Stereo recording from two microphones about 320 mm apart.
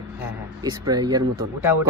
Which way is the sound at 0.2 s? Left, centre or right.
Centre.